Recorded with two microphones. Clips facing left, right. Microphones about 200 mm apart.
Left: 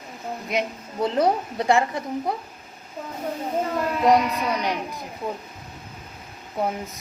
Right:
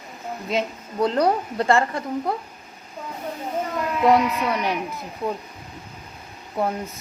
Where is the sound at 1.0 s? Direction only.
20° left (ahead or behind).